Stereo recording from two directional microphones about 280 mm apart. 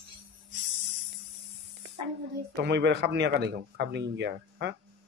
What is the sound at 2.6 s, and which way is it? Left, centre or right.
Speech, right.